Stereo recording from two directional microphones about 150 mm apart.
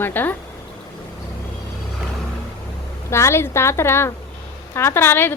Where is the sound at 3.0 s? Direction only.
20° left (ahead or behind).